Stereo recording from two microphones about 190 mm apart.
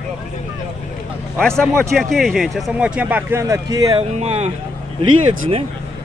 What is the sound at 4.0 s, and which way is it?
Speech, 35° right (ahead or behind).